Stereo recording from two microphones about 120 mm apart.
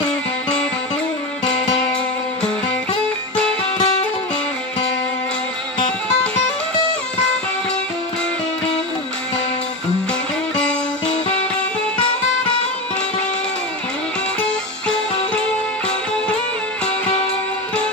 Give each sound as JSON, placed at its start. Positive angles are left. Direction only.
{"t": 3.7, "sound": "music", "side_deg": 55}
{"t": 10.5, "sound": "music", "side_deg": 5}
{"t": 14.4, "sound": "music", "side_deg": 5}